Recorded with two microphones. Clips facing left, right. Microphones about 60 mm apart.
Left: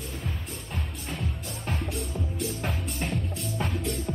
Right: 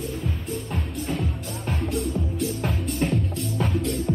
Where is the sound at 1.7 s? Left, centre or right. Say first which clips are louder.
Right 6 dB; centre.